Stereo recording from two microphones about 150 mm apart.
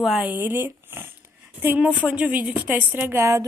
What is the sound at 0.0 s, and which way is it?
A woman's voice, 5° right (ahead or behind).